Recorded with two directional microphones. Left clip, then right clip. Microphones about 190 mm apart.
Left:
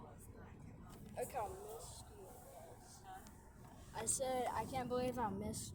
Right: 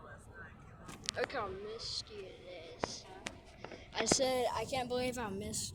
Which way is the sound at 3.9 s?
40° right (ahead or behind).